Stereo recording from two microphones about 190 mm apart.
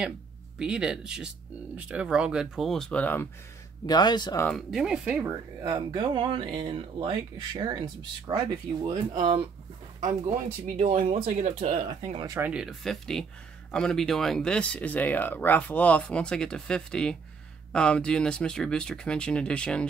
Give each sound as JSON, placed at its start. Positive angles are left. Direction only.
{"t": 0.6, "sound": "speech", "side_deg": -5}
{"t": 3.8, "sound": "speech", "side_deg": 20}
{"t": 4.5, "sound": "speech", "side_deg": 0}
{"t": 10.8, "sound": "speech", "side_deg": -40}
{"t": 12.4, "sound": "speech", "side_deg": -5}